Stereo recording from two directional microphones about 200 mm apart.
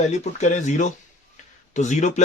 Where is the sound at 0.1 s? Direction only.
35° left (ahead or behind).